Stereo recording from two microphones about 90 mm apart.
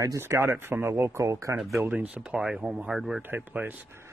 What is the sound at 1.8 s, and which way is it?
Speech, 15° right (ahead or behind).